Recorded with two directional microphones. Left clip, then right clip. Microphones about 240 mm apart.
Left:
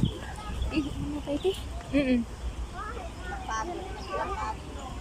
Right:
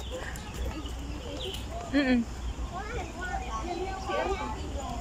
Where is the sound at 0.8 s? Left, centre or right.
Left.